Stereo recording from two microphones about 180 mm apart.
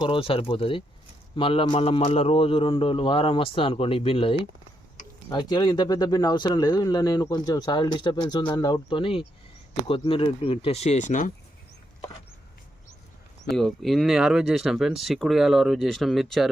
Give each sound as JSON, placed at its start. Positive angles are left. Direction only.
{"t": 0.0, "sound": "a man's voice", "side_deg": 30}
{"t": 13.5, "sound": "speech", "side_deg": 0}